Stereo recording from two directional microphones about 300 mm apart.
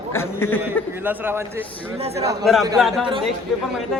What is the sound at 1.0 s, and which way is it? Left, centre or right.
Speech, centre.